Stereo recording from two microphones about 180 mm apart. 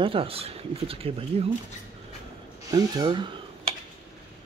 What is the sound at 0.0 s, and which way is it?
Speech, 30° right (ahead or behind).